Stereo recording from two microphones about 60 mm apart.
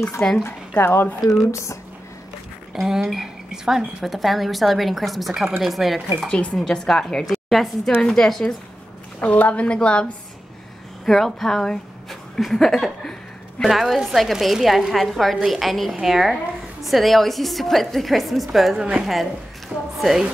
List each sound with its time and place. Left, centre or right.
0.4 s speech: left
1.2 s speech: centre
1.5 s speech: left
2.7 s speech: centre
6.5 s speech: centre
7.2 s a woman's voice: centre
9.2 s a woman's voice: left
11.1 s speech: centre
18.8 s speech: centre